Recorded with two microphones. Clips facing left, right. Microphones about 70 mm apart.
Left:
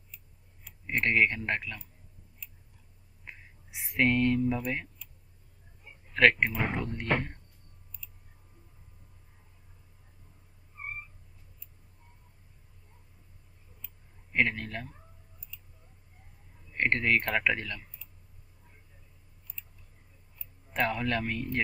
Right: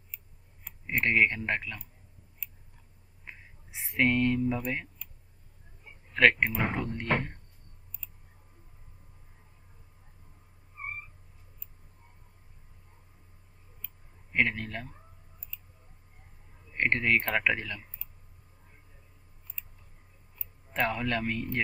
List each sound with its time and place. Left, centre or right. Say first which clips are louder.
0.9 s speech: right 1 dB; centre
3.7 s a sound: even; centre
3.9 s speech: even; centre
6.1 s speech: even; centre
14.3 s speech: even; centre
15.5 s a sound: right 1 dB; right
16.7 s speech: even; centre
20.7 s speech: even; centre